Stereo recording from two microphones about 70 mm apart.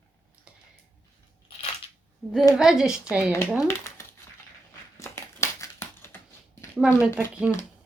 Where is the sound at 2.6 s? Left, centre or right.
Centre.